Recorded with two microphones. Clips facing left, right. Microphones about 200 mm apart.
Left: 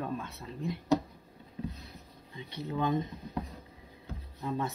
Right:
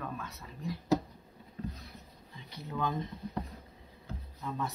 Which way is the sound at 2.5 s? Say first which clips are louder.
Left 4 dB; 20° left (ahead or behind).